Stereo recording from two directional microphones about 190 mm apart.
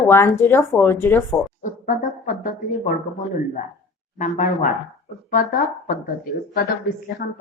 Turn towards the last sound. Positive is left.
turn(degrees=55)  # may be behind; listen again after turning